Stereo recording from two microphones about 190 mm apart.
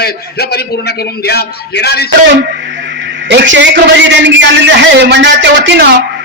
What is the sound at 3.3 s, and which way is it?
A man's voice, 70° right (ahead or behind).